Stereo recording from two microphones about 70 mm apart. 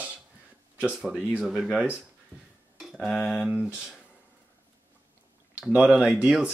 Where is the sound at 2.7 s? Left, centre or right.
Centre.